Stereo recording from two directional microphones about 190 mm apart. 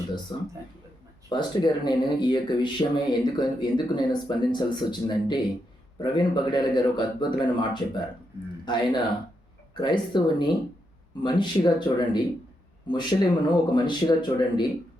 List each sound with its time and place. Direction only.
0.3 s speech: 25° left (ahead or behind)